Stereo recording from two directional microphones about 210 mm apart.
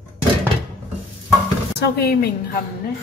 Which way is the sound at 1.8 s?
50° left (ahead or behind).